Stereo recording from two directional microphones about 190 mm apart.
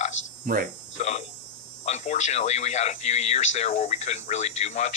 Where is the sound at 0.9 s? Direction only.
35° left (ahead or behind).